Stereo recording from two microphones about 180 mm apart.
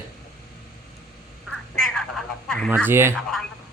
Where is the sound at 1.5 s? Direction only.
Centre (ahead or behind).